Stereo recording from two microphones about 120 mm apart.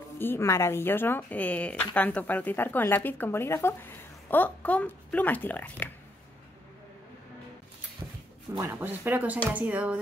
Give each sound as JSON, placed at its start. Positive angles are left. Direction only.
{"t": 0.2, "sound": "a woman's voice", "side_deg": 20}
{"t": 8.0, "sound": "a sound", "side_deg": -10}
{"t": 8.5, "sound": "speech", "side_deg": -20}